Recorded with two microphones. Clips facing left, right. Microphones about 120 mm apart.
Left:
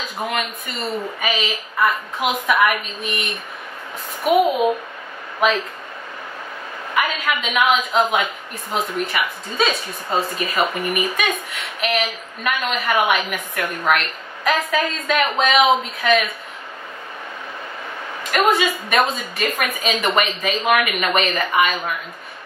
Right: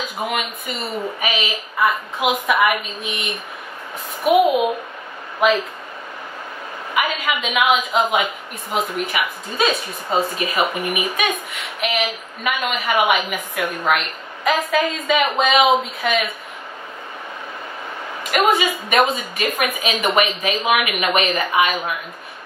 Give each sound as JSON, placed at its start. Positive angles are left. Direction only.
{"t": 0.0, "sound": "a woman's voice", "side_deg": -5}
{"t": 6.9, "sound": "a woman's voice", "side_deg": -5}
{"t": 18.3, "sound": "a woman's voice", "side_deg": -5}